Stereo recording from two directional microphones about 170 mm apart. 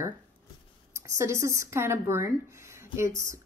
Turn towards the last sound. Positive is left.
turn(degrees=-15)  # may be behind; listen again after turning